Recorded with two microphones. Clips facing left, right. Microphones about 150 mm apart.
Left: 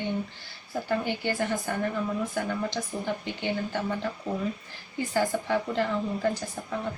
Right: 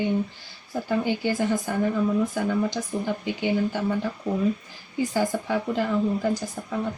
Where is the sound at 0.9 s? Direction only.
15° right (ahead or behind).